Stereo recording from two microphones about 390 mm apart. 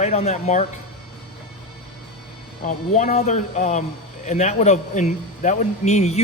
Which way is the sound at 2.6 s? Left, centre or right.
Centre.